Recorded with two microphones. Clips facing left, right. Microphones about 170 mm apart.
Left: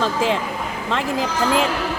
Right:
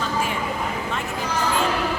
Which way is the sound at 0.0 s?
90° left.